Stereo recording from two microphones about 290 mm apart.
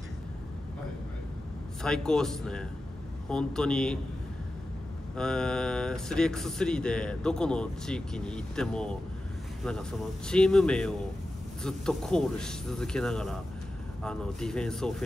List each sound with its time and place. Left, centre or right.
1.8 s speech: centre
5.1 s speech: centre